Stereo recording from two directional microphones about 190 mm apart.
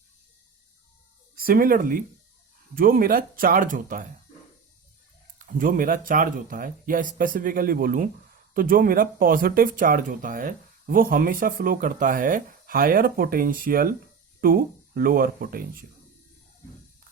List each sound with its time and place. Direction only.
1.4 s speech: 50° right (ahead or behind)
5.5 s speech: 45° right (ahead or behind)